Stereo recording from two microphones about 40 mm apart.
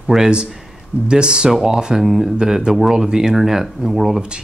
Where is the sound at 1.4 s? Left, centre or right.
Centre.